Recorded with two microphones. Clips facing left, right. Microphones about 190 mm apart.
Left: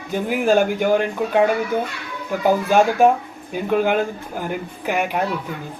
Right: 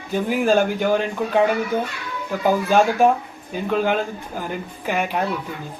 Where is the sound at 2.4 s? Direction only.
15° left (ahead or behind).